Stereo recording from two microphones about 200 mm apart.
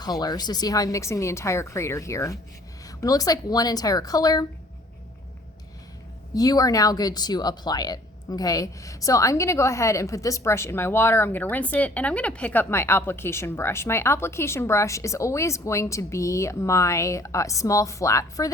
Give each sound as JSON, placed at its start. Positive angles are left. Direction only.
{"t": 0.0, "sound": "a woman's voice", "side_deg": 20}
{"t": 6.3, "sound": "speech", "side_deg": 20}